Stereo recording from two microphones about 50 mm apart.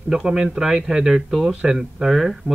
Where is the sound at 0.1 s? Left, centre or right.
Centre.